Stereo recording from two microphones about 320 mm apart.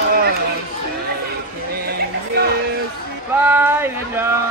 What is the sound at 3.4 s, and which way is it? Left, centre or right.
Speech, centre.